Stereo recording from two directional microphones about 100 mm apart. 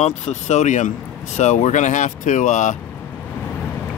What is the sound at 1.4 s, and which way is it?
Speech, 90° left.